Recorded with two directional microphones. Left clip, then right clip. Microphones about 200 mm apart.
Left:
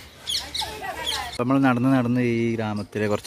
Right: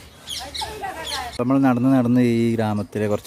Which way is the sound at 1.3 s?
Centre (ahead or behind).